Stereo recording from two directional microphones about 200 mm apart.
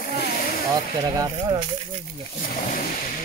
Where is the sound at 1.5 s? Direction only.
25° right (ahead or behind).